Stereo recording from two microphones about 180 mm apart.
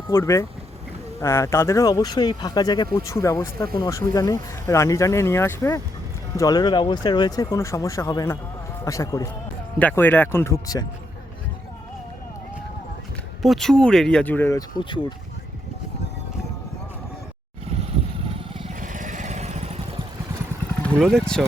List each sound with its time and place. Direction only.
0.1 s speech: 15° left (ahead or behind)
13.4 s speech: centre (ahead or behind)
18.8 s vehicle: 45° right (ahead or behind)
20.8 s speech: 5° left (ahead or behind)